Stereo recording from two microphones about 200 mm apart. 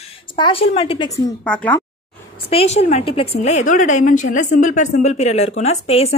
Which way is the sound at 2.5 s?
30° left (ahead or behind).